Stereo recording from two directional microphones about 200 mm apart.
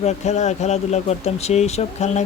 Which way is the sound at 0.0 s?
35° left (ahead or behind).